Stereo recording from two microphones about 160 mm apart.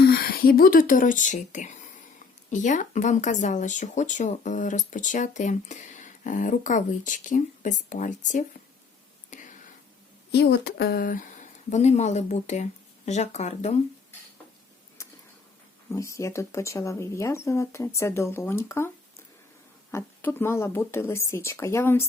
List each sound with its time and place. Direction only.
0.0 s speech: 75° left (ahead or behind); by 8.4 s 50° left (ahead or behind)
10.3 s speech: 90° left; by 11.3 s 60° left (ahead or behind)
11.7 s speech: 45° left (ahead or behind)
15.0 s a sound: 20° left (ahead or behind)
15.9 s speech: 20° left (ahead or behind)